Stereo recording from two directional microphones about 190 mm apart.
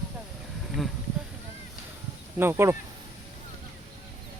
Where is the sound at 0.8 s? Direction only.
Centre (ahead or behind).